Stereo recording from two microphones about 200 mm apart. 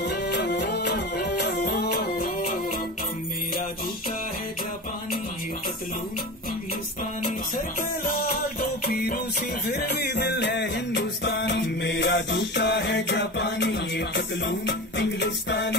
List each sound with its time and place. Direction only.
0.0 s music: 55° left (ahead or behind)
8.0 s music: 45° left (ahead or behind)